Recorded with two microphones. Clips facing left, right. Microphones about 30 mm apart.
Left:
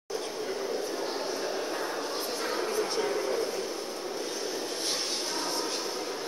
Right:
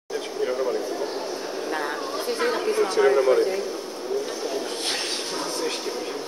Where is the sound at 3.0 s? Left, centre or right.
Right.